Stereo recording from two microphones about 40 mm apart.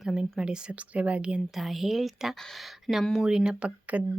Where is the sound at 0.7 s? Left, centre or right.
Right.